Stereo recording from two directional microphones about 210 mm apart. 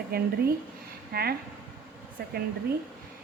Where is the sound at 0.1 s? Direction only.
50° right (ahead or behind).